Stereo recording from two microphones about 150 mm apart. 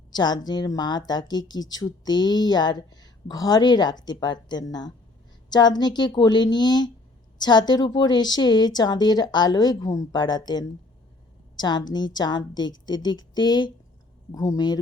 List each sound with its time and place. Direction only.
0.1 s speech: 30° left (ahead or behind)